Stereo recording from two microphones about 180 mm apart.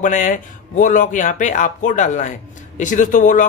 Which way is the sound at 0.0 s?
45° left (ahead or behind).